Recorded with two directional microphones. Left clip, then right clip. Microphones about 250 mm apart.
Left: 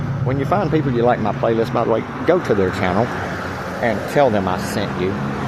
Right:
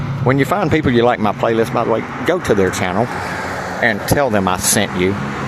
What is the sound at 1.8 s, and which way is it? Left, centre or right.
Speech, centre.